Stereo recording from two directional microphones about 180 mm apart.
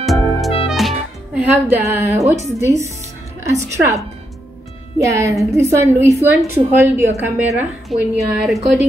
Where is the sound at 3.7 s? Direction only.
15° right (ahead or behind).